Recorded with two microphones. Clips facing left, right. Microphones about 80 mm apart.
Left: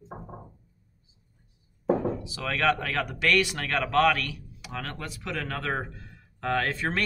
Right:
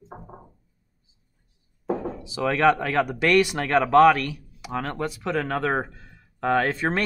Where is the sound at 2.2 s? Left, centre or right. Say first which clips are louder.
Right 7 dB; right.